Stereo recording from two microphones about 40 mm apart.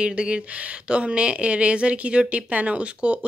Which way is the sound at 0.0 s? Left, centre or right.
Right.